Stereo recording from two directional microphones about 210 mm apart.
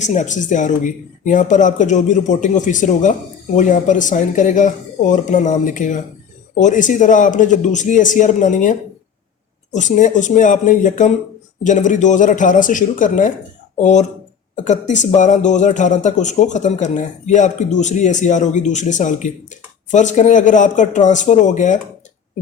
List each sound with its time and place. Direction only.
0.0 s speech: 35° left (ahead or behind)
9.7 s speech: 35° left (ahead or behind)